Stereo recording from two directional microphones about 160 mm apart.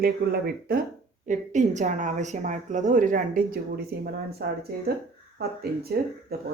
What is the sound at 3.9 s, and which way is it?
Speech, 75° right (ahead or behind).